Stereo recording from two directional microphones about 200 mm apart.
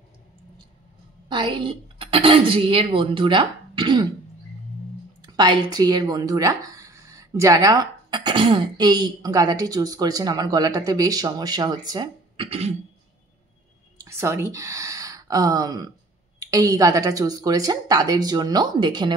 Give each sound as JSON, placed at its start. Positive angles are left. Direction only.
{"t": 1.3, "sound": "speech", "side_deg": -25}
{"t": 5.2, "sound": "speech", "side_deg": -20}
{"t": 14.0, "sound": "speech", "side_deg": -15}